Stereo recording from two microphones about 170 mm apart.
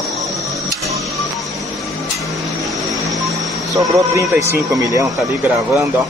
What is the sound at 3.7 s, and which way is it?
Speech, 20° right (ahead or behind).